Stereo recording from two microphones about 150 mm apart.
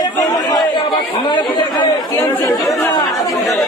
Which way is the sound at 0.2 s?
25° left (ahead or behind).